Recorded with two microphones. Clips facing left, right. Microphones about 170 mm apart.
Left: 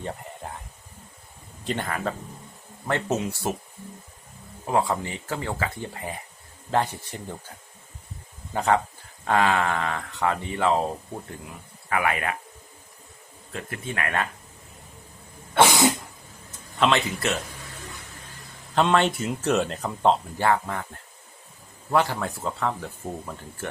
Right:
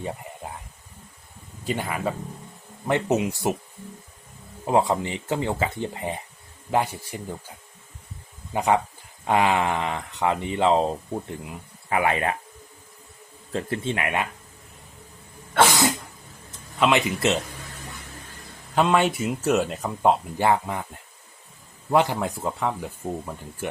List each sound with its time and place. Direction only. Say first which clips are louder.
0.0 s a sound: right 1 dB; 5° right (ahead or behind)
1.6 s speech: right 1 dB; 10° right (ahead or behind)
4.6 s speech: right 3 dB; 20° right (ahead or behind)
8.5 s speech: right 1 dB; 15° right (ahead or behind)
13.5 s speech: right 7 dB; 30° right (ahead or behind)
16.9 s speech: right 3 dB; 20° right (ahead or behind)
18.7 s speech: right 1 dB; 5° right (ahead or behind)